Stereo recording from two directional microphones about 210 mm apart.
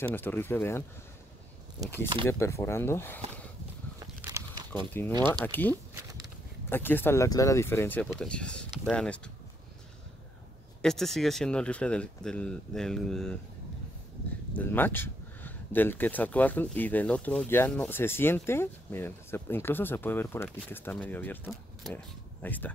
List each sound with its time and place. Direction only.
0.0 s speech: 10° left (ahead or behind)
2.2 s speech: 10° left (ahead or behind)
4.0 s a sound: 15° right (ahead or behind)
4.7 s speech: 10° left (ahead or behind)
10.8 s speech: centre (ahead or behind)
14.6 s speech: 10° left (ahead or behind)